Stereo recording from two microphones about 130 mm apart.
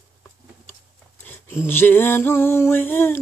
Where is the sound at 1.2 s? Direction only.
15° left (ahead or behind).